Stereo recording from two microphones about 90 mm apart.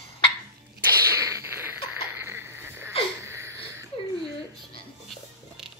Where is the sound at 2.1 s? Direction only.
25° right (ahead or behind).